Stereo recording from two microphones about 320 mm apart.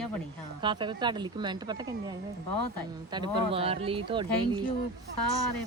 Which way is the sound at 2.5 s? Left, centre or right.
Left.